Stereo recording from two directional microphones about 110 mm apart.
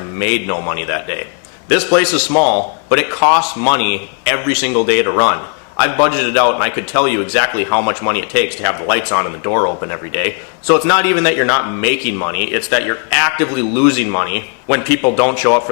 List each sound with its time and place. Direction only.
0.2 s a man's voice: 15° left (ahead or behind)